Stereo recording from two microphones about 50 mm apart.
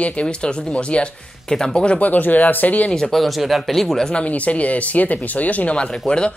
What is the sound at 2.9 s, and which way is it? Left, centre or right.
Speech, centre.